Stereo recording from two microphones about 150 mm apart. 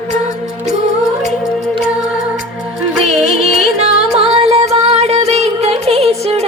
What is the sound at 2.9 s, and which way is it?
Music, centre (ahead or behind).